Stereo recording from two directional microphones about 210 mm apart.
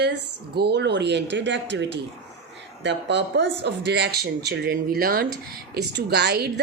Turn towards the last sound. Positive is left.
turn(degrees=-50)  # may be behind; listen again after turning